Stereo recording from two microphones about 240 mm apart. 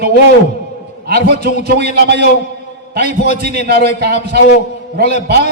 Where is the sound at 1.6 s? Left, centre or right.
Right.